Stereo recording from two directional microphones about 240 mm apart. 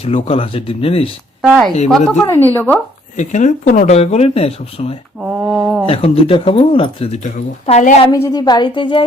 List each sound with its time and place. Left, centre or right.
0.0 s speech: left
1.4 s a woman's voice: centre
3.2 s speech: left
5.2 s a sound: centre
5.8 s speech: left
8.1 s a woman's voice: centre